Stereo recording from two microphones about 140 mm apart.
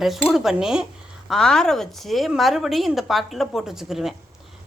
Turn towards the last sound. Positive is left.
turn(degrees=0)  # may be behind; listen again after turning